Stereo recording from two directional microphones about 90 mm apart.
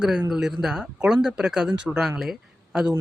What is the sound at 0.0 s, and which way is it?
Speech, 5° right (ahead or behind).